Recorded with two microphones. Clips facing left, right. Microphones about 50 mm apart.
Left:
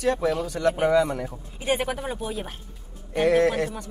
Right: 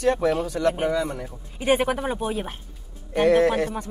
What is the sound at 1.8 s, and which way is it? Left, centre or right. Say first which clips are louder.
Speech: right 4 dB; centre.